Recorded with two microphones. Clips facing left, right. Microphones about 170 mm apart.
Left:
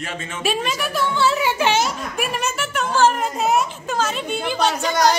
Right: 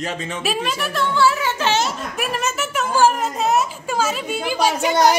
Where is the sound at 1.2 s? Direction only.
20° left (ahead or behind).